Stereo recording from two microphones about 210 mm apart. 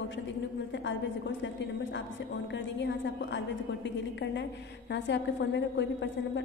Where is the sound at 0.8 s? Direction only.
60° left (ahead or behind).